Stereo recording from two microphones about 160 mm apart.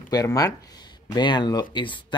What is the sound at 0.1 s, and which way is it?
Speech, 25° left (ahead or behind).